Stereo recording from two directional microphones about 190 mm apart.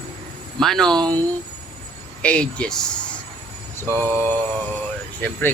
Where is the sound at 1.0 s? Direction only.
20° right (ahead or behind).